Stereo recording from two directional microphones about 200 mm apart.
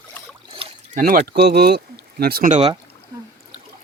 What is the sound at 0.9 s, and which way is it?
Speech, 45° right (ahead or behind).